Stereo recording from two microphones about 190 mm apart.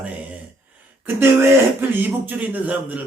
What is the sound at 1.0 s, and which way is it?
A man's voice, 10° right (ahead or behind).